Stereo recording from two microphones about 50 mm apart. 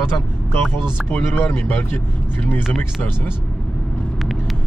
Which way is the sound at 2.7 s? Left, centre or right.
Left.